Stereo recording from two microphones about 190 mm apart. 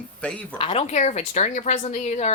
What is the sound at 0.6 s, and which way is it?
A woman's voice, 30° left (ahead or behind).